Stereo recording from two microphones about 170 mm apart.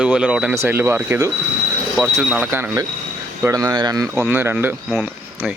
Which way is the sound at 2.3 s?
10° right (ahead or behind).